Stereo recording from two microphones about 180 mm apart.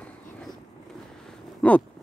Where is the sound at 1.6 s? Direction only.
5° left (ahead or behind).